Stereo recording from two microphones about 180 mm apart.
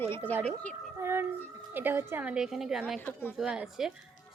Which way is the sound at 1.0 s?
15° right (ahead or behind).